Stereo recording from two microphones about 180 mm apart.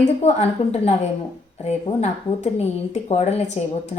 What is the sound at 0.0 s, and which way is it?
Speech, 40° left (ahead or behind).